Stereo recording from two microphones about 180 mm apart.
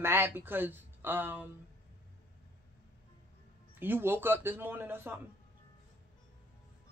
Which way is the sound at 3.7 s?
10° right (ahead or behind).